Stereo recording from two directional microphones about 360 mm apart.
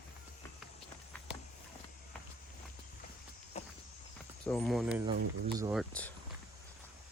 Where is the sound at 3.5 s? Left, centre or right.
Centre.